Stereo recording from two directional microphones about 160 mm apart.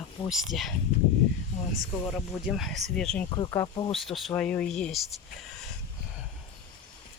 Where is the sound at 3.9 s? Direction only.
Centre (ahead or behind).